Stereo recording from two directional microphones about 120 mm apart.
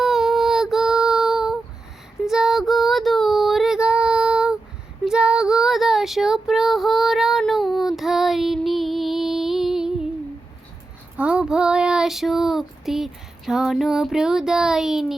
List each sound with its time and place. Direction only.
0.0 s child singing: 5° right (ahead or behind)
2.2 s female singing: 5° right (ahead or behind)
5.0 s child singing: 5° right (ahead or behind)
11.2 s child singing: 5° right (ahead or behind)